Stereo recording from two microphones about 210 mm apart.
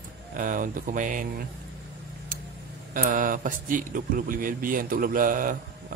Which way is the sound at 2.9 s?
40° right (ahead or behind).